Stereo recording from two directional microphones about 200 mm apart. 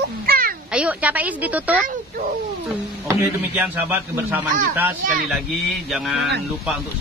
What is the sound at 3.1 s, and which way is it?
Speech, 10° right (ahead or behind).